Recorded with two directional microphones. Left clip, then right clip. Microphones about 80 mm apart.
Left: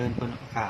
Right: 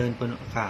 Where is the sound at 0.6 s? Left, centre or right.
Right.